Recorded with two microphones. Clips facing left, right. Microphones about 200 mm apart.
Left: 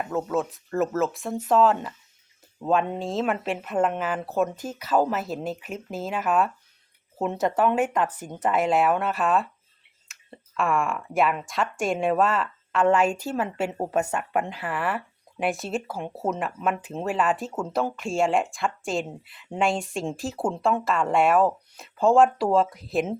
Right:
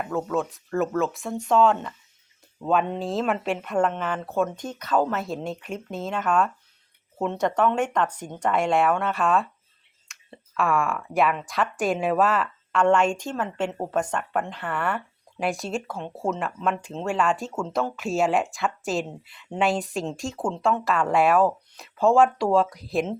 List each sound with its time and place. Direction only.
0.0 s speech: centre (ahead or behind)
10.1 s clicking: centre (ahead or behind)
10.6 s speech: centre (ahead or behind)